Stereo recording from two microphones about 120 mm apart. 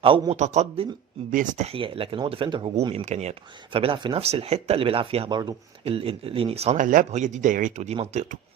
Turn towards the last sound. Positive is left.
turn(degrees=-80)